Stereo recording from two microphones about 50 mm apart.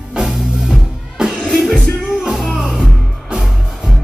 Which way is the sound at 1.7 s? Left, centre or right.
Centre.